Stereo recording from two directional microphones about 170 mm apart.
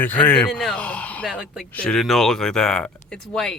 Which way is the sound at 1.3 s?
5° right (ahead or behind).